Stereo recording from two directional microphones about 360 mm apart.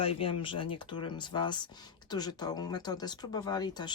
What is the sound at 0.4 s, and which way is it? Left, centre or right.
Speech, centre.